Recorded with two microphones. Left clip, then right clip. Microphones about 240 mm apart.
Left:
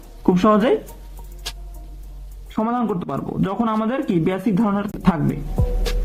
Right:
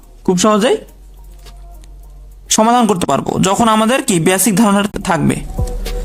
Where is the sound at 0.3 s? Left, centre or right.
Right.